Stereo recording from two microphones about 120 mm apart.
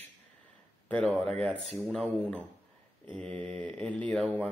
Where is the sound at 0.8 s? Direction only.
10° left (ahead or behind).